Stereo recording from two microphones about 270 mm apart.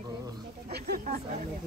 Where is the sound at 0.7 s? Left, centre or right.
Right.